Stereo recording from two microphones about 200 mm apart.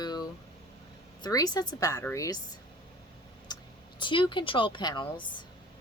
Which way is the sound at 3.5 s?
20° left (ahead or behind).